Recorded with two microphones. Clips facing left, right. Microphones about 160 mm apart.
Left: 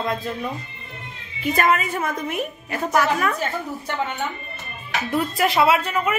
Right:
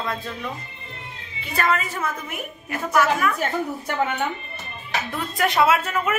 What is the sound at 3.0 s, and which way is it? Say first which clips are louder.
Speech: right 1 dB; 35° left (ahead or behind).